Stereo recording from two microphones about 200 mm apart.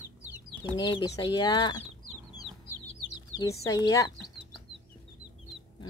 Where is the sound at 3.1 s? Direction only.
20° left (ahead or behind).